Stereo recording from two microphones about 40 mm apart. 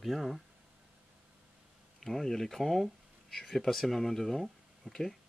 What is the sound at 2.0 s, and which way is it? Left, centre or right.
Speech, centre.